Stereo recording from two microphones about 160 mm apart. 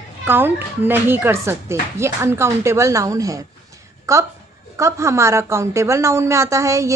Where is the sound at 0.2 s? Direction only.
10° right (ahead or behind).